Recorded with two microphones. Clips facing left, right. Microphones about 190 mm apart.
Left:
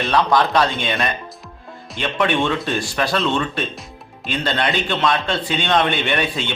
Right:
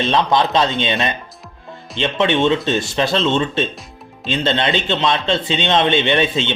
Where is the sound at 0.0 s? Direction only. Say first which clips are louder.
Right 1 dB; 25° right (ahead or behind).